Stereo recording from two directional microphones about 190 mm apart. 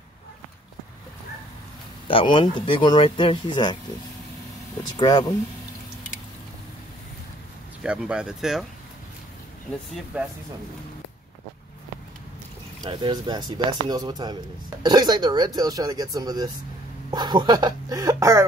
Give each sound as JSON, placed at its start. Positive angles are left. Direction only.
{"t": 2.0, "sound": "speech", "side_deg": 25}
{"t": 4.9, "sound": "speech", "side_deg": 20}
{"t": 7.8, "sound": "speech", "side_deg": -5}
{"t": 10.1, "sound": "speech", "side_deg": -10}
{"t": 12.8, "sound": "speech", "side_deg": -25}